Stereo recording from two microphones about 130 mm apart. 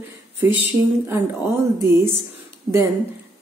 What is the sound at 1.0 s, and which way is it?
Speech, 20° right (ahead or behind).